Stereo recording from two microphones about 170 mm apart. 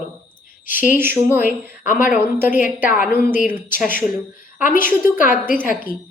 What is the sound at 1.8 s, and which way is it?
Speech, 50° left (ahead or behind).